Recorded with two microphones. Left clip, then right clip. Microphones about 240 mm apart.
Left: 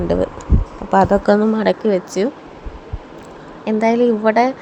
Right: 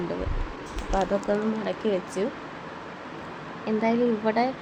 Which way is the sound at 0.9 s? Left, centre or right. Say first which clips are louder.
Left 12 dB; left.